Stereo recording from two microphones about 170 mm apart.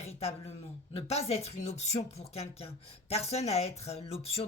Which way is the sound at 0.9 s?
35° left (ahead or behind).